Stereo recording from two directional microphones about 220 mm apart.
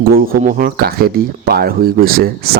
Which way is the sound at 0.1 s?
40° right (ahead or behind).